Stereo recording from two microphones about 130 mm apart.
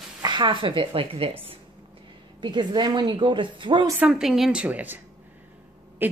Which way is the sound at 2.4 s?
35° right (ahead or behind).